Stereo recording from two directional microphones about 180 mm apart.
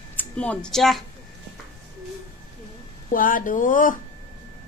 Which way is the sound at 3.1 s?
50° left (ahead or behind).